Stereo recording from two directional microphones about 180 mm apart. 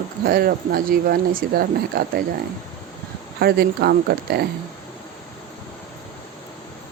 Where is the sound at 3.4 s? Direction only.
60° right (ahead or behind).